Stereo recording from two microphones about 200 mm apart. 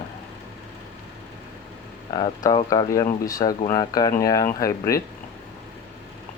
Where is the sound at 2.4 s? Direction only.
20° left (ahead or behind).